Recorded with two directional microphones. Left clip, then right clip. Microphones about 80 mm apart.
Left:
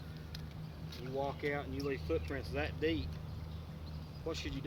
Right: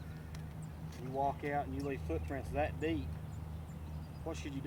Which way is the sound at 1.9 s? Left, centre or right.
Right.